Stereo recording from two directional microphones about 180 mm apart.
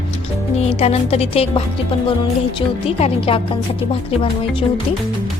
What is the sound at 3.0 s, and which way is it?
Speech, 35° left (ahead or behind).